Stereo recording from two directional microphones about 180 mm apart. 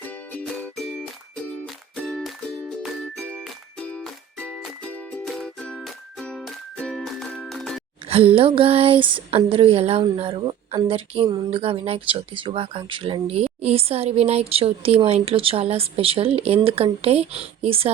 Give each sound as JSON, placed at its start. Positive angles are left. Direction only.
{"t": 0.0, "sound": "music", "side_deg": 5}
{"t": 8.0, "sound": "a sound", "side_deg": -30}
{"t": 8.4, "sound": "speech", "side_deg": -30}